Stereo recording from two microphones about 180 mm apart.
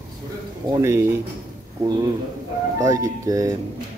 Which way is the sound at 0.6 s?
20° right (ahead or behind).